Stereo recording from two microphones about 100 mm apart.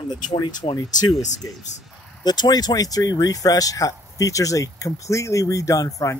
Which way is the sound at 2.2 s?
45° left (ahead or behind).